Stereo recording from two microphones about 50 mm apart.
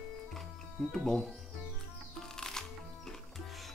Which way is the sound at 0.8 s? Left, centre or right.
Centre.